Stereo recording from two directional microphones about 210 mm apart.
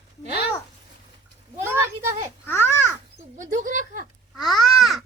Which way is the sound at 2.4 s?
10° left (ahead or behind).